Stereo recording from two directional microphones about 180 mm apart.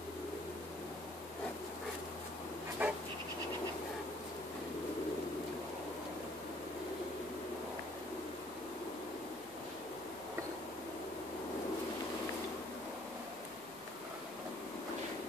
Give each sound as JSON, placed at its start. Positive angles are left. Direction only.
{"t": 2.8, "sound": "dog", "side_deg": -10}